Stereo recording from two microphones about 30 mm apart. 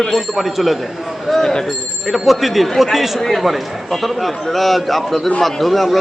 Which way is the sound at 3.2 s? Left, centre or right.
Centre.